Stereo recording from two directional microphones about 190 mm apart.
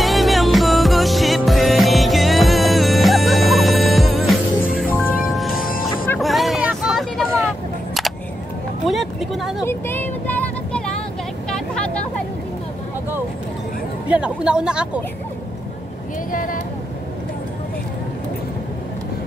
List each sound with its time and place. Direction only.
0.0 s music: centre (ahead or behind)
4.8 s music: 10° left (ahead or behind)
5.3 s music: centre (ahead or behind)
6.1 s vehicle: centre (ahead or behind)
8.8 s vehicle: centre (ahead or behind)
9.7 s vehicle: 10° left (ahead or behind)
14.0 s a sound: 5° right (ahead or behind)
16.3 s a sound: 45° left (ahead or behind)